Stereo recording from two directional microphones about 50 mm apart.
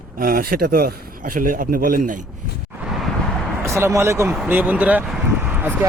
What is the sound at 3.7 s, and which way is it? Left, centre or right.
Speech, right.